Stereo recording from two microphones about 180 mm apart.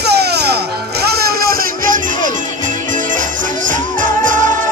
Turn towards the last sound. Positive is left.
turn(degrees=-45)  # may be behind; listen again after turning